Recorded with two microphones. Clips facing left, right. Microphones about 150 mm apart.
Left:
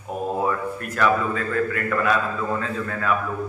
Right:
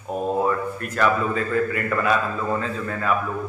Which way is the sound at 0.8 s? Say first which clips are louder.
Even; centre (ahead or behind).